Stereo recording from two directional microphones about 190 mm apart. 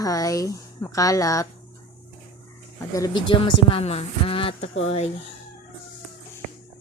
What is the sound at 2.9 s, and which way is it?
Speech, 20° left (ahead or behind).